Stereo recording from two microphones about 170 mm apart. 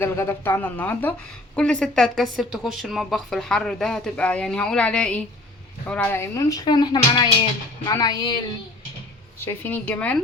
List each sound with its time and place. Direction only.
0.0 s a woman's voice: 15° left (ahead or behind)
9.4 s speech: 10° left (ahead or behind)